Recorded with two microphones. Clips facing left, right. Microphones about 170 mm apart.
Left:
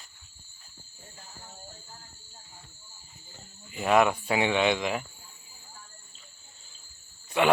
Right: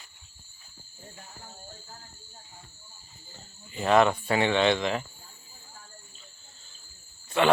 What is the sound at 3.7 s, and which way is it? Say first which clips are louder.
Speech: right 1 dB; 10° left (ahead or behind).